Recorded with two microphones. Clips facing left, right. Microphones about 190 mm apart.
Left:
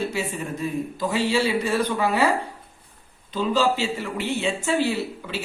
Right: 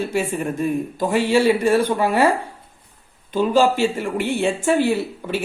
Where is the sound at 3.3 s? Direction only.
50° right (ahead or behind).